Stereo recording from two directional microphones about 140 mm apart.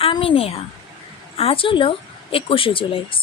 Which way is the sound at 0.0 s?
40° left (ahead or behind).